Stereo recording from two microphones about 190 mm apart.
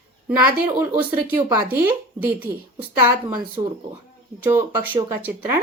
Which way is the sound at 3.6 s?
25° right (ahead or behind).